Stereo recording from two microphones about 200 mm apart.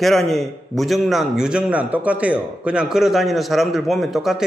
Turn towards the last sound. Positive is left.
turn(degrees=0)  # may be behind; listen again after turning